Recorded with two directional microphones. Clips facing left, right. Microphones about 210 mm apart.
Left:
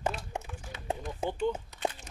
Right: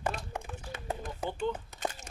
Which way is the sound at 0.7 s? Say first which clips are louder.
Left 3 dB; 50° right (ahead or behind).